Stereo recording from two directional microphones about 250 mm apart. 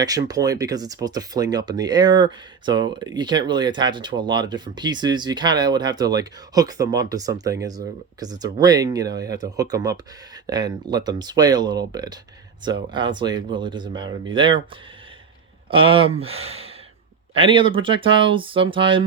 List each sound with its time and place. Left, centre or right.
0.0 s speech: centre
15.7 s speech: right